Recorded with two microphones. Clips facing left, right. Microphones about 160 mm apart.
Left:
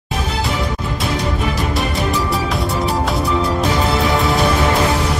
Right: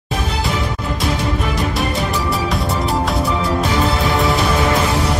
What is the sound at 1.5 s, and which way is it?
Music, centre (ahead or behind).